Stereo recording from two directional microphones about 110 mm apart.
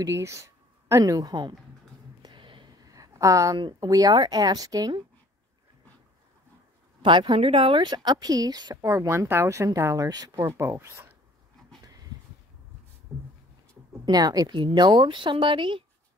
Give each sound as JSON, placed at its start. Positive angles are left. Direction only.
{"t": 0.0, "sound": "a woman's voice", "side_deg": -25}
{"t": 2.2, "sound": "a sound", "side_deg": -50}
{"t": 2.9, "sound": "a sound", "side_deg": -30}
{"t": 3.5, "sound": "speech", "side_deg": -40}
{"t": 7.0, "sound": "speech", "side_deg": -45}
{"t": 7.8, "sound": "speech", "side_deg": -40}
{"t": 14.0, "sound": "speech", "side_deg": -35}
{"t": 14.6, "sound": "speech", "side_deg": -45}